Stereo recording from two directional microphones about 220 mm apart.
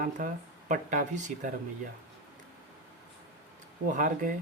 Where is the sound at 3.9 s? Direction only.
35° right (ahead or behind).